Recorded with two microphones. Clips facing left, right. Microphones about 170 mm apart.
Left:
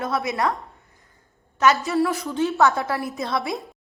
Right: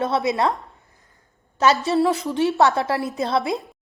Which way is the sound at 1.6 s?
30° right (ahead or behind).